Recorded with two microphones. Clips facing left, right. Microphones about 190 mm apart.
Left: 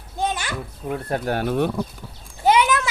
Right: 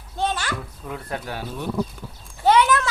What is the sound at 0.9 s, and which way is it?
Speech, 45° left (ahead or behind).